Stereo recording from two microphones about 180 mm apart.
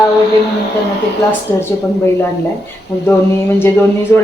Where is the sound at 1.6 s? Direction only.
15° left (ahead or behind).